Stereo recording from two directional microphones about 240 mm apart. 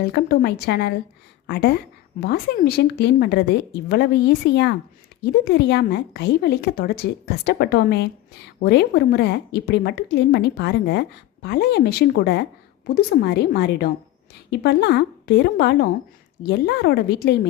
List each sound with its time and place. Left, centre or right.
0.0 s a woman's voice: left